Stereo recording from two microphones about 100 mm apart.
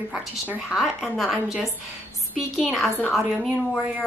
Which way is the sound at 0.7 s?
5° right (ahead or behind).